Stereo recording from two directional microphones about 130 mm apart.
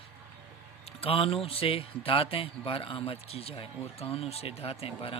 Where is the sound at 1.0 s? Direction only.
45° left (ahead or behind).